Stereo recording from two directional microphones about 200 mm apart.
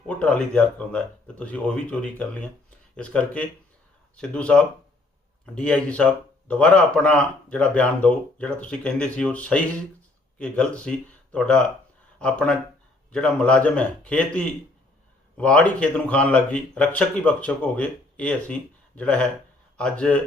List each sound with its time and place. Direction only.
0.1 s speech: 5° left (ahead or behind)